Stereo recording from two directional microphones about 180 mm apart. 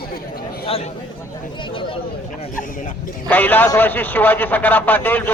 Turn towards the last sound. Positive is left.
turn(degrees=10)  # may be behind; listen again after turning